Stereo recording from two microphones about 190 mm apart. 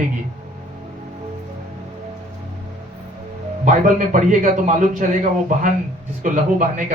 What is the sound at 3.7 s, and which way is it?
A man's voice, 40° right (ahead or behind).